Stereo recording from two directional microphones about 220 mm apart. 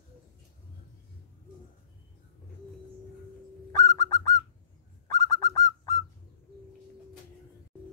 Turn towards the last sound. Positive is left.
turn(degrees=15)  # may be behind; listen again after turning